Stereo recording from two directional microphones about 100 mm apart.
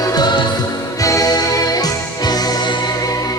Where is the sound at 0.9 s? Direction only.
35° left (ahead or behind).